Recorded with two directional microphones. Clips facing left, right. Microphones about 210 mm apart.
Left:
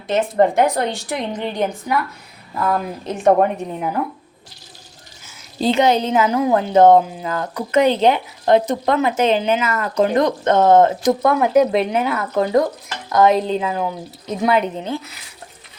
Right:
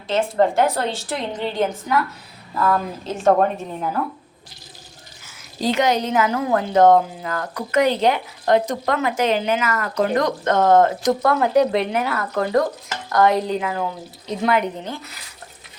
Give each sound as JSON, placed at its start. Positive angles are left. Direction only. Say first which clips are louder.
{"t": 0.1, "sound": "a woman's voice", "louder": "left 2 dB", "side_deg": 20}
{"t": 5.5, "sound": "a woman's voice", "louder": "left 3 dB", "side_deg": 25}